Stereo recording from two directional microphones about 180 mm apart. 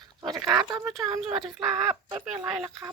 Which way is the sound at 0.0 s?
25° right (ahead or behind).